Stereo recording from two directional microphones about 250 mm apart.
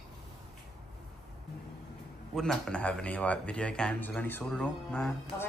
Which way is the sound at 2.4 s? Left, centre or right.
Centre.